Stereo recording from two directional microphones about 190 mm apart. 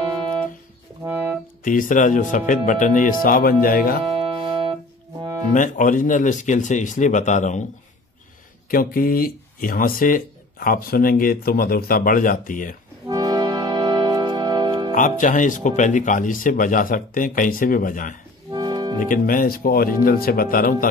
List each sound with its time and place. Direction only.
0.0 s music: 25° right (ahead or behind)
1.0 s music: 10° right (ahead or behind)
1.6 s speech: 45° left (ahead or behind)
4.1 s music: 25° right (ahead or behind)
5.5 s speech: 45° left (ahead or behind)
8.6 s speech: 50° left (ahead or behind)
13.1 s music: 20° right (ahead or behind)
15.0 s speech: 45° left (ahead or behind)
18.5 s music: 20° right (ahead or behind)
18.9 s speech: 45° left (ahead or behind)